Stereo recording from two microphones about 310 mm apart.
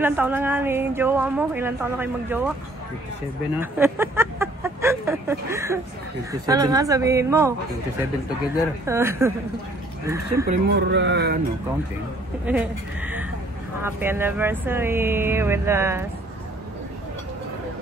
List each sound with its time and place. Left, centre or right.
0.0 s a woman's voice: centre
3.7 s a woman's voice: centre
8.8 s a woman's voice: centre
10.4 s speech: right
12.4 s a woman's voice: centre